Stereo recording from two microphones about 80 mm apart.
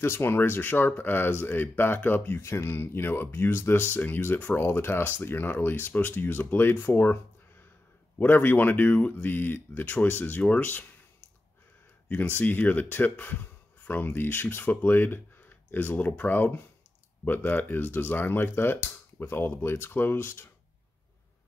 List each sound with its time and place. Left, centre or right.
0.0 s speech: left
8.2 s speech: left
12.4 s speech: left